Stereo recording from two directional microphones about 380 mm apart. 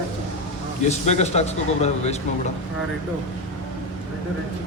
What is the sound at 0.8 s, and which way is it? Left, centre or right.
A man's voice, centre.